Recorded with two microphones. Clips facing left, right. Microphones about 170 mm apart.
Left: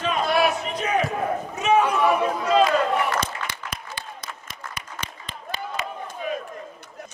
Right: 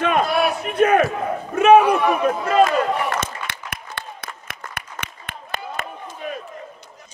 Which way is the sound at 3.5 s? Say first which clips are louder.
Even; 60° right (ahead or behind).